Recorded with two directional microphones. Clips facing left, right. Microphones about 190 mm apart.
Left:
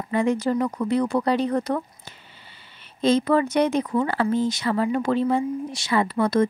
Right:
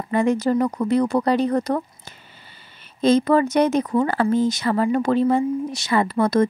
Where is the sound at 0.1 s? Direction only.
45° right (ahead or behind).